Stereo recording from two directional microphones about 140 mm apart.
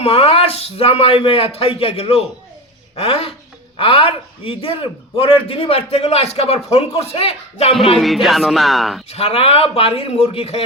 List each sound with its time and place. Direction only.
0.0 s a man's voice: 45° left (ahead or behind)
7.9 s speech: centre (ahead or behind)
9.0 s a man's voice: 45° left (ahead or behind)